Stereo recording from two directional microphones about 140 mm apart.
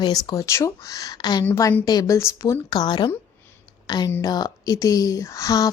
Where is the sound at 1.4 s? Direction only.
15° left (ahead or behind).